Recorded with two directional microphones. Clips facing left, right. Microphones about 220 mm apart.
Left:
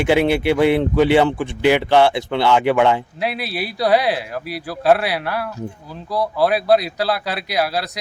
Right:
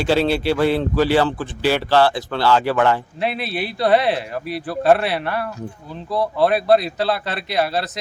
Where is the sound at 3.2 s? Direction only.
Centre (ahead or behind).